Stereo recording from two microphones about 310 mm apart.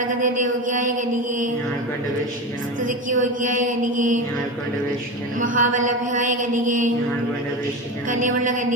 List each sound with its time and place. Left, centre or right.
0.2 s mantra: right
2.9 s mantra: right
5.4 s mantra: right
8.1 s mantra: right